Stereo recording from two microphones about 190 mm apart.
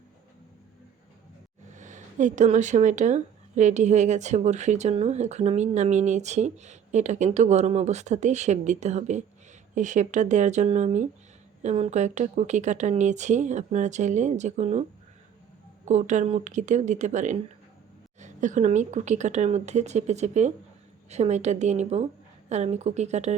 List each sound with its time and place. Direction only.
1.7 s speech: 40° right (ahead or behind)
15.9 s speech: 40° right (ahead or behind)